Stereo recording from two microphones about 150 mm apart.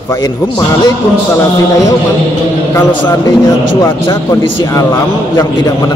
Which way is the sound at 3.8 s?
20° left (ahead or behind).